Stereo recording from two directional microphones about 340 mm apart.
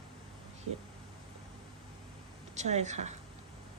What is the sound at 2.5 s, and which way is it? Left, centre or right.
Speech, centre.